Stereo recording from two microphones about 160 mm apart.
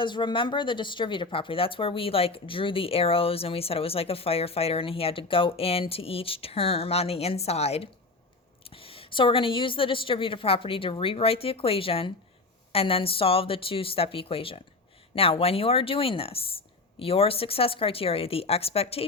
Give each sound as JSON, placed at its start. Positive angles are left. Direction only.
{"t": 0.0, "sound": "speech", "side_deg": 30}